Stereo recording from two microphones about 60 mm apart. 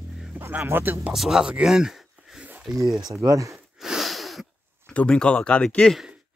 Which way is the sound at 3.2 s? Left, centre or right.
Right.